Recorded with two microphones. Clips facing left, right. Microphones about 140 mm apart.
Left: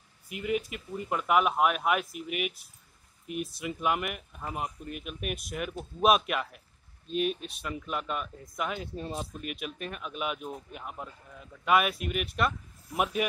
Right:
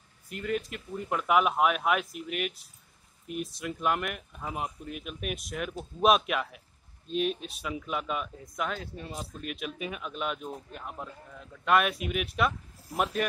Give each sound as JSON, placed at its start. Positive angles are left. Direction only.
{"t": 0.3, "sound": "speech", "side_deg": 10}
{"t": 8.9, "sound": "speech", "side_deg": 30}
{"t": 9.4, "sound": "speech", "side_deg": 0}